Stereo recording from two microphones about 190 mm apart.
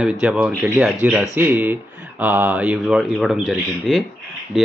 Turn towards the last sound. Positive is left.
turn(degrees=0)  # may be behind; listen again after turning